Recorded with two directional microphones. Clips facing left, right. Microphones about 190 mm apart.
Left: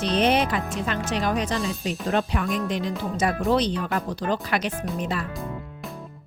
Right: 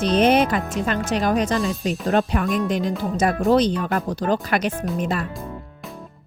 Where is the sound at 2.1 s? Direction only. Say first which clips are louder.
Right 4 dB; 45° right (ahead or behind).